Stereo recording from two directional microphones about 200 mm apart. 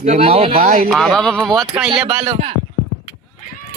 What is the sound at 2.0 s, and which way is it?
Speech, 30° right (ahead or behind).